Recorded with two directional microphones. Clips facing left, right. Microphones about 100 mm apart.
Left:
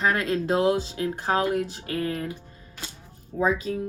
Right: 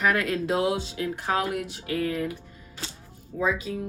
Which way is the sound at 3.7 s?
45° left (ahead or behind).